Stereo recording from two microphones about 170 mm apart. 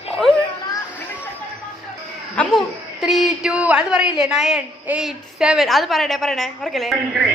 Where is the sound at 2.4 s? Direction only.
5° left (ahead or behind).